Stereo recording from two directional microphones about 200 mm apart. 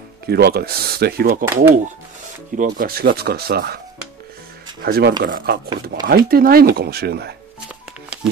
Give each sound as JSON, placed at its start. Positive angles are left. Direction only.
{"t": 0.3, "sound": "speech", "side_deg": -50}
{"t": 1.5, "sound": "speech", "side_deg": -10}
{"t": 2.5, "sound": "speech", "side_deg": -45}
{"t": 4.8, "sound": "speech", "side_deg": -50}